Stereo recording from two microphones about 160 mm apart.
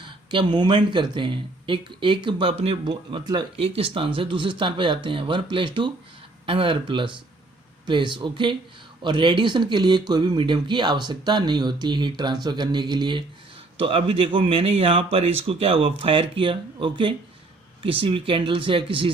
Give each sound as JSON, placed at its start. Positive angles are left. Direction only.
{"t": 0.0, "sound": "speech", "side_deg": -30}